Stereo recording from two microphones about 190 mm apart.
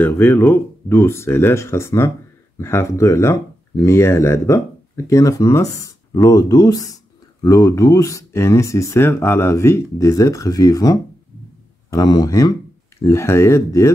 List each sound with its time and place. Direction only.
0.0 s speech: 10° left (ahead or behind)